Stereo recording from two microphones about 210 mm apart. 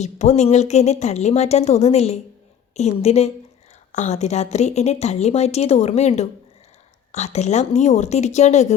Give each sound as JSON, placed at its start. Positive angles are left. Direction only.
{"t": 0.0, "sound": "a woman's voice", "side_deg": 35}